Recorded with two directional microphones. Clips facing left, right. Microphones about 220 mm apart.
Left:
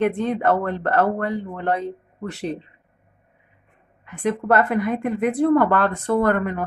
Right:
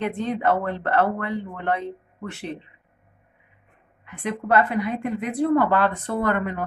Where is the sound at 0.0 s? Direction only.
50° left (ahead or behind).